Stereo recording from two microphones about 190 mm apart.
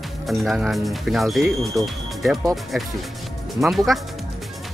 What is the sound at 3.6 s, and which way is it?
Speech, centre (ahead or behind).